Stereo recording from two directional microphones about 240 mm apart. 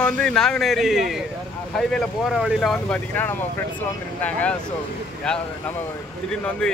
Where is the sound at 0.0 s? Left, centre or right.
Centre.